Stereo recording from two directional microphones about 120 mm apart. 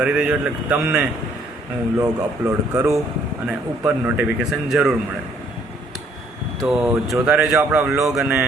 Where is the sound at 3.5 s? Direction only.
10° right (ahead or behind).